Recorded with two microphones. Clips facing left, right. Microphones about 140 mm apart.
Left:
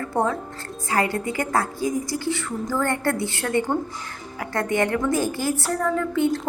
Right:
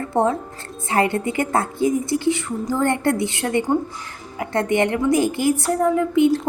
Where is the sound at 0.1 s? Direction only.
25° right (ahead or behind).